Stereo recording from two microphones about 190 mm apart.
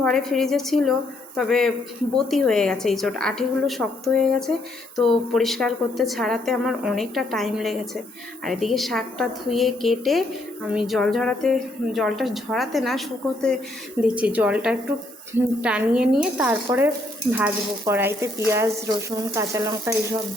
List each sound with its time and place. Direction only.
0.0 s a woman's voice: 5° left (ahead or behind); by 20.0 s 15° right (ahead or behind)